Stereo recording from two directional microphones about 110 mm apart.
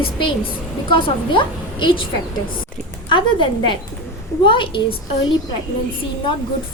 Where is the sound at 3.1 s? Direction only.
45° left (ahead or behind).